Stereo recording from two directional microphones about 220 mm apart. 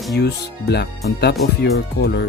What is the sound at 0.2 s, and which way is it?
Speech, 50° left (ahead or behind).